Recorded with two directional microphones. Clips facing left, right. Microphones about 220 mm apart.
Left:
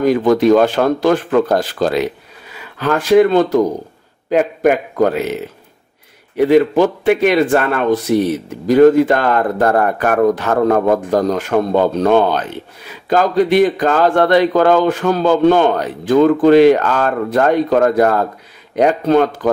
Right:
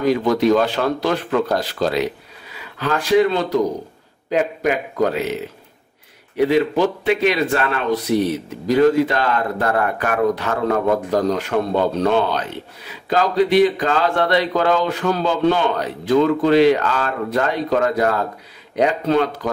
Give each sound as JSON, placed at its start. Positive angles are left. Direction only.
{"t": 0.1, "sound": "speech", "side_deg": 50}
{"t": 6.3, "sound": "speech", "side_deg": 50}